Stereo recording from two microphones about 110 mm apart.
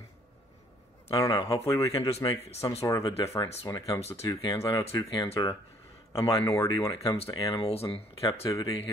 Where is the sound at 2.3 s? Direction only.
70° left (ahead or behind).